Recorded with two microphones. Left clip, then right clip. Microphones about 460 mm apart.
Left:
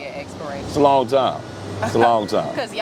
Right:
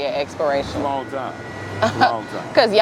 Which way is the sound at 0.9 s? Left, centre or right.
Left.